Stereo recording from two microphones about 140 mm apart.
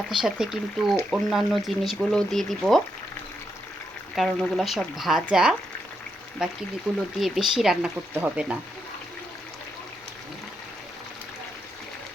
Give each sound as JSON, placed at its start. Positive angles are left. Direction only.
{"t": 0.1, "sound": "speech", "side_deg": -5}
{"t": 4.1, "sound": "speech", "side_deg": 0}